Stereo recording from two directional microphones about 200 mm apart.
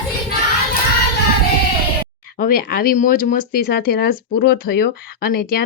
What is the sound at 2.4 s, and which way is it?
Speech, 45° left (ahead or behind).